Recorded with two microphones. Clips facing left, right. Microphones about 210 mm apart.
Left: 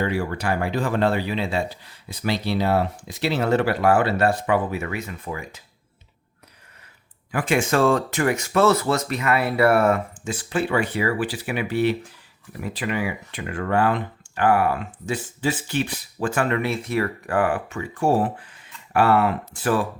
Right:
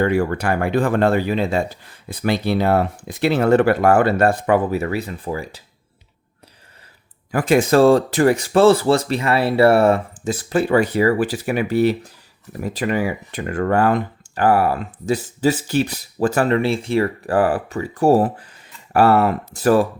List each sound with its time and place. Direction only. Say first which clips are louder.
0.0 s speech: right 6 dB; 50° right (ahead or behind); by 5.6 s 35° right (ahead or behind)
7.3 s speech: right 6 dB; 40° right (ahead or behind)